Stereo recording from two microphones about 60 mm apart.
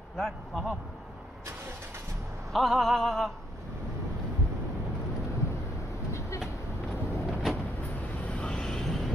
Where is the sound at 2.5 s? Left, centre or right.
Centre.